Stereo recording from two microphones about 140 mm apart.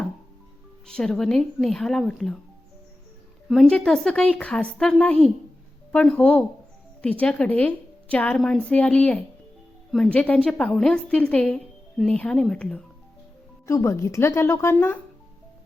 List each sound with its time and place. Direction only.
0.9 s speech: 5° left (ahead or behind)
3.5 s a woman's voice: 5° left (ahead or behind)
13.7 s a woman's voice: 20° left (ahead or behind)